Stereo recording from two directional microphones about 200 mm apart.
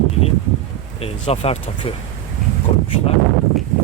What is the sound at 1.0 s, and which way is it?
Speech, 30° left (ahead or behind).